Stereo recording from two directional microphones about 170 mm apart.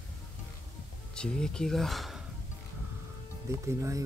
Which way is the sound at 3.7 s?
15° right (ahead or behind).